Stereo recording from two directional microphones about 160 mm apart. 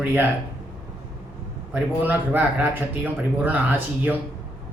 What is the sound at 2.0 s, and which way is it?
A man's voice, 10° right (ahead or behind).